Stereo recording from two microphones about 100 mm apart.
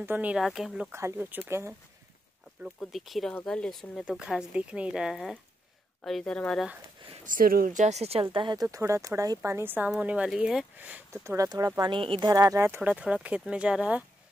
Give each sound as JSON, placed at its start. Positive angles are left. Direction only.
{"t": 0.0, "sound": "speech", "side_deg": -15}
{"t": 0.4, "sound": "a woman's voice", "side_deg": 0}
{"t": 0.9, "sound": "speech", "side_deg": -25}
{"t": 2.8, "sound": "a woman's voice", "side_deg": 0}
{"t": 4.0, "sound": "speech", "side_deg": -5}
{"t": 8.0, "sound": "speech", "side_deg": -90}
{"t": 8.3, "sound": "speech", "side_deg": -55}
{"t": 8.7, "sound": "a woman's voice", "side_deg": -30}
{"t": 10.8, "sound": "speech", "side_deg": -15}
{"t": 11.2, "sound": "speech", "side_deg": -35}
{"t": 11.8, "sound": "speech", "side_deg": -60}
{"t": 12.2, "sound": "speech", "side_deg": -35}
{"t": 12.5, "sound": "speech", "side_deg": -25}
{"t": 12.8, "sound": "speech", "side_deg": -10}